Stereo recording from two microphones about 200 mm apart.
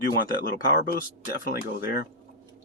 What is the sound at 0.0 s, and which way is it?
Speech, 50° left (ahead or behind).